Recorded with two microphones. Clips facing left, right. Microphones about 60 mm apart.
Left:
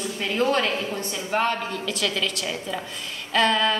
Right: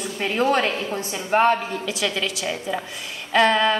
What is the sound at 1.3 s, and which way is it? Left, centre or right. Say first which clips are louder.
Speech: right 6 dB; right.